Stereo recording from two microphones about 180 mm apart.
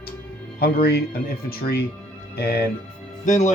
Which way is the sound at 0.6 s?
60° left (ahead or behind).